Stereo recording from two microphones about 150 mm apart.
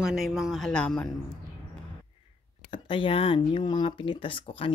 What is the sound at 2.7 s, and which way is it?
Speech, 35° left (ahead or behind).